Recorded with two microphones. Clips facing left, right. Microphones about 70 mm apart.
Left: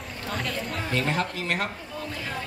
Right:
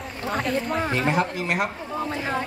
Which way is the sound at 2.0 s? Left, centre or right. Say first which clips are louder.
Right 8 dB; right.